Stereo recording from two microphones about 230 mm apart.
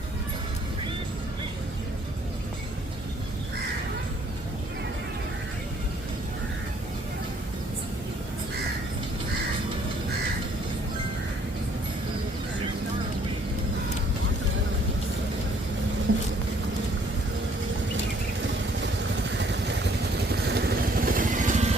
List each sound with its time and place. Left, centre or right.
18.8 s vehicle: right